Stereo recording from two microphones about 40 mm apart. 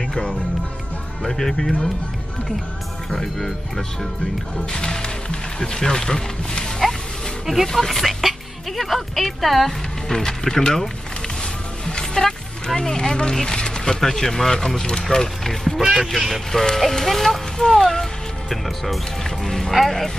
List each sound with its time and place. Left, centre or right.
0.0 s music: centre
1.2 s speech: centre
3.1 s speech: centre
4.6 s speech: centre
7.4 s speech: centre
15.8 s speech: centre
16.5 s speech: centre
19.2 s speech: centre